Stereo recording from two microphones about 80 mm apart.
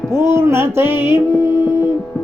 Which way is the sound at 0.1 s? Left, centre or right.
Right.